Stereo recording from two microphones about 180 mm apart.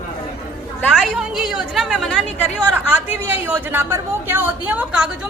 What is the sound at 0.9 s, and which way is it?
A man's voice, centre (ahead or behind).